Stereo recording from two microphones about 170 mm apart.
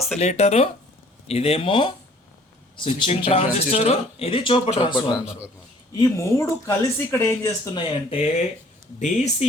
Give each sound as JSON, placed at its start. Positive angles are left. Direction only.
{"t": 0.2, "sound": "speech", "side_deg": 40}
{"t": 5.2, "sound": "a man's voice", "side_deg": -5}
{"t": 6.0, "sound": "speech", "side_deg": 15}
{"t": 7.9, "sound": "speech", "side_deg": 35}